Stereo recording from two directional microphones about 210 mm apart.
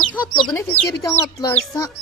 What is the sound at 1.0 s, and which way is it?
Speech, 15° left (ahead or behind).